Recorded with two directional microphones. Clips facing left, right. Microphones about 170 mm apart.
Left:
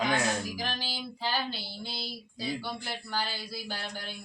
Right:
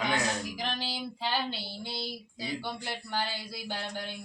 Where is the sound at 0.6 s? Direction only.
25° right (ahead or behind).